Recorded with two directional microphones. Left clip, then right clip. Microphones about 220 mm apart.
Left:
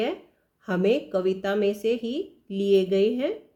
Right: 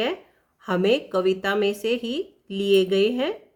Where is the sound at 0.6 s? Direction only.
25° right (ahead or behind).